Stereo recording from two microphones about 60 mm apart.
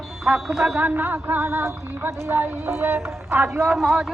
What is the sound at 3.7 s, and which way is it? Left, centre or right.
Speech, centre.